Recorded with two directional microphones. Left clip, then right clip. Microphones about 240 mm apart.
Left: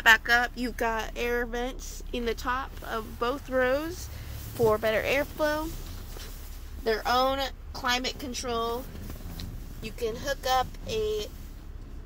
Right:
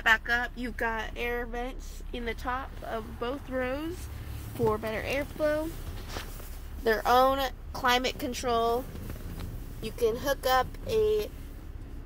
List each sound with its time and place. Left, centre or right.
0.0 s speech: left
2.4 s speech: centre
6.8 s a woman's voice: right
9.9 s speech: centre